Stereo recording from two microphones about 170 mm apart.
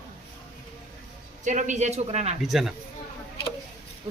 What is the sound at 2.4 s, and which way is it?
Speech, centre (ahead or behind).